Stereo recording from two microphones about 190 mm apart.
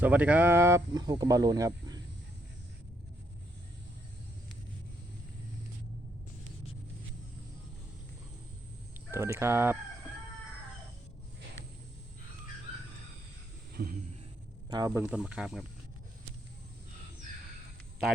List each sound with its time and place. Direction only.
0.0 s speech: 10° right (ahead or behind)
9.1 s speech: 15° right (ahead or behind)
13.7 s a sound: 50° right (ahead or behind)
14.7 s speech: 15° right (ahead or behind)